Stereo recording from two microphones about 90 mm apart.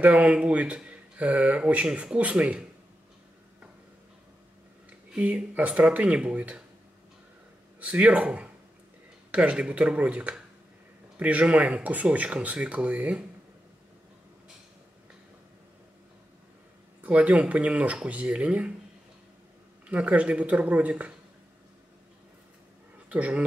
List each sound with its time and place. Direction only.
0.0 s speech: 15° right (ahead or behind)
4.8 s speech: 15° right (ahead or behind)
7.8 s speech: 15° right (ahead or behind)
17.0 s speech: 15° right (ahead or behind)
19.9 s speech: 15° right (ahead or behind)
23.0 s speech: 15° right (ahead or behind)